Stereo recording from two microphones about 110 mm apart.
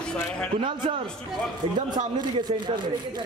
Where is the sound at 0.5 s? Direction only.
50° right (ahead or behind).